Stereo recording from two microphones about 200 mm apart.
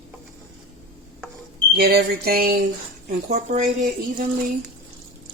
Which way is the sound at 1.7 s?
50° right (ahead or behind).